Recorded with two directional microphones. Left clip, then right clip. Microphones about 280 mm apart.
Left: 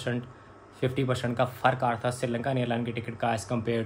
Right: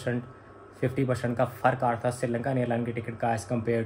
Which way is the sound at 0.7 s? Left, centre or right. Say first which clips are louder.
Even; centre.